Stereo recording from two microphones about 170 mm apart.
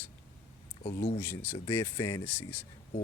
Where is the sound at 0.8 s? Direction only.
75° left (ahead or behind).